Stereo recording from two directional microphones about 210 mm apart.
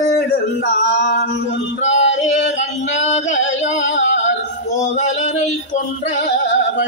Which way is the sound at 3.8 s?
65° left (ahead or behind).